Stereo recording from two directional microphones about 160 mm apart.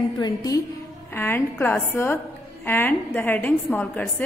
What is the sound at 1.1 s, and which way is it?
A woman's voice, 15° left (ahead or behind).